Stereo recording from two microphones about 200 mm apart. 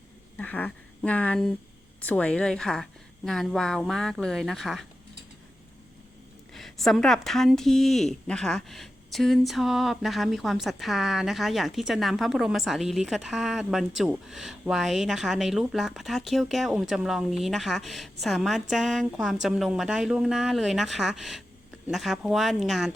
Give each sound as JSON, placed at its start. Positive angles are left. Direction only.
{"t": 0.3, "sound": "speech", "side_deg": 10}
{"t": 6.5, "sound": "speech", "side_deg": 0}